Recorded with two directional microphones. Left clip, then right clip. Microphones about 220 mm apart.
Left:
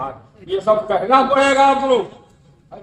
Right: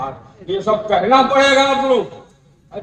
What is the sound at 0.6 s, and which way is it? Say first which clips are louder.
A man's voice: right 1 dB; 35° left (ahead or behind).